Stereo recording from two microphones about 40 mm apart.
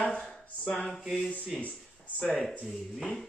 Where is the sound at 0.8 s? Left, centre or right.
Centre.